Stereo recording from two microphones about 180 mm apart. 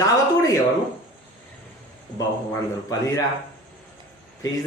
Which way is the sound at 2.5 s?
20° left (ahead or behind).